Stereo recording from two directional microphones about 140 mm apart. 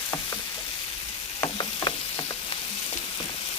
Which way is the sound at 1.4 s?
30° left (ahead or behind).